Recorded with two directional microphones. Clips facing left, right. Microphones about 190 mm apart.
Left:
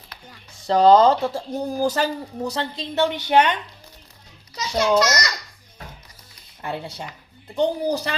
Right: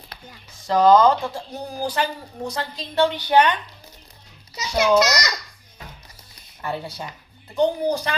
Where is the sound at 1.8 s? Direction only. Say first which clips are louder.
Left 2 dB; 45° left (ahead or behind).